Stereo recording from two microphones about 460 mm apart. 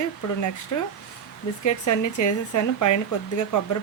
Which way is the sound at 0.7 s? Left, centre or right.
Left.